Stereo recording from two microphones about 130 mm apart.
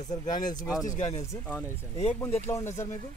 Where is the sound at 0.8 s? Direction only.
60° left (ahead or behind).